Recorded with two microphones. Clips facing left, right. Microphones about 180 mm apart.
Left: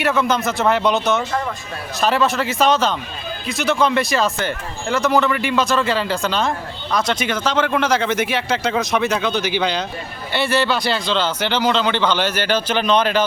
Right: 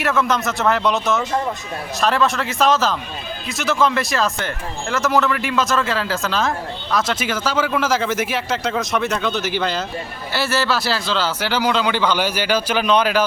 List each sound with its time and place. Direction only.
0.0 s a man's voice: centre (ahead or behind)